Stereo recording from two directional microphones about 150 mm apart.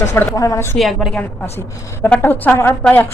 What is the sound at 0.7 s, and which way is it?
Speech, centre (ahead or behind).